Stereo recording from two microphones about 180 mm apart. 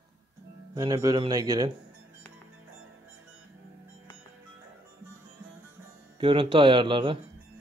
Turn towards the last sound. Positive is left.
turn(degrees=-25)  # may be behind; listen again after turning